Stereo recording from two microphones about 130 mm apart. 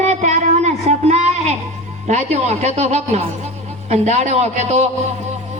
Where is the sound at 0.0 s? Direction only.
65° right (ahead or behind).